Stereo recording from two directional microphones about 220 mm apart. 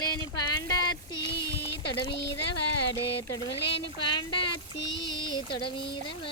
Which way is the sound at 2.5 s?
90° left.